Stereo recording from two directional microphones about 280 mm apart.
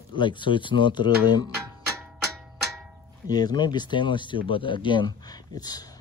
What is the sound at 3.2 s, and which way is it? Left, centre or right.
Speech, centre.